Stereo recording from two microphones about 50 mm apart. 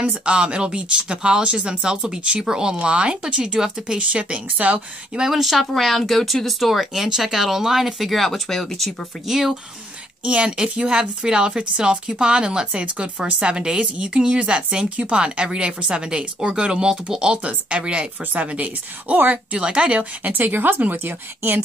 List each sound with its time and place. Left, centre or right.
0.0 s speech: right
5.1 s speech: centre
9.3 s speech: centre
10.2 s speech: right